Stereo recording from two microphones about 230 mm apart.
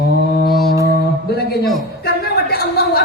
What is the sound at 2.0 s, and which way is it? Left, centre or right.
A man's voice, left.